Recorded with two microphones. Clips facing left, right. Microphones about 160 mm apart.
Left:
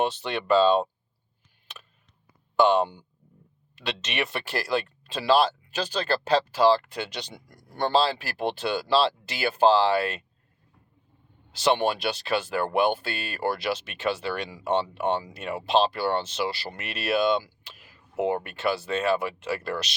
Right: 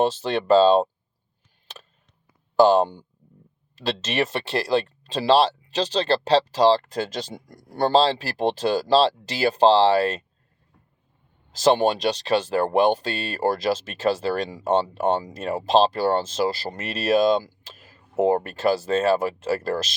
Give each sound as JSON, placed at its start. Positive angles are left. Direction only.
{"t": 0.0, "sound": "speech", "side_deg": -35}
{"t": 2.6, "sound": "speech", "side_deg": -35}
{"t": 11.5, "sound": "speech", "side_deg": -40}